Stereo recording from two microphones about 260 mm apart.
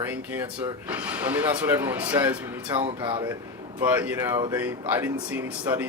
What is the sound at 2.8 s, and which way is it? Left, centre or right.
Speech, centre.